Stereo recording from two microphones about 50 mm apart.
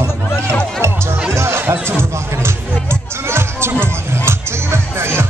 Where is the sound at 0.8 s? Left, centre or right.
Right.